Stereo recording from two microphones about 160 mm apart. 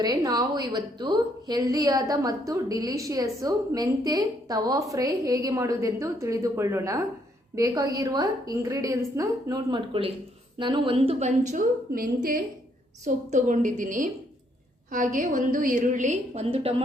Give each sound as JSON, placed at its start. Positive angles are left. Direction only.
{"t": 0.0, "sound": "a woman's voice", "side_deg": -25}